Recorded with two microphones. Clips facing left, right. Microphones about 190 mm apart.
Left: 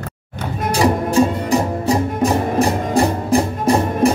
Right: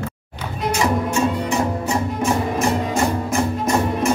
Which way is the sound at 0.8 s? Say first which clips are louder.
Left 5 dB; 35° left (ahead or behind).